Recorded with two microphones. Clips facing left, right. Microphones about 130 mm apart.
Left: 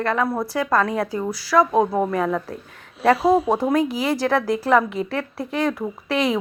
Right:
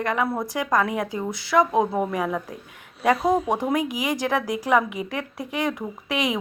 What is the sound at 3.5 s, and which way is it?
A woman's voice, 15° right (ahead or behind).